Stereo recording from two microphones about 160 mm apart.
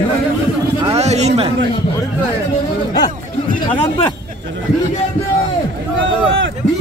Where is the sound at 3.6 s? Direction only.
30° left (ahead or behind).